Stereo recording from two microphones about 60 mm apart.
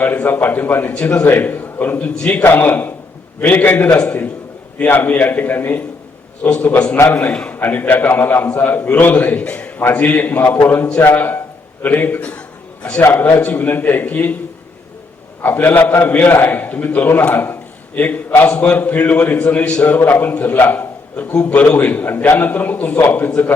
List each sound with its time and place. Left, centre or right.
0.0 s a man's voice: left
3.8 s a man's voice: centre
7.5 s a man's voice: left
15.5 s a man's voice: left